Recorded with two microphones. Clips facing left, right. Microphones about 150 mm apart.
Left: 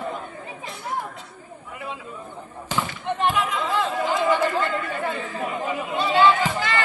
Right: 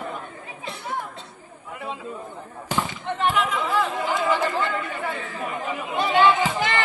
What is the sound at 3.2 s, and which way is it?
Chatter, 15° left (ahead or behind).